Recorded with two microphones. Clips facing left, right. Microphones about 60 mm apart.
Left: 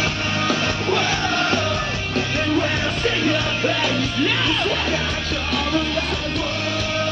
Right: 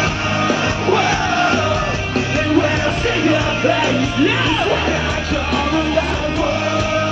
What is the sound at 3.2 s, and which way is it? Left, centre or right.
Music, centre.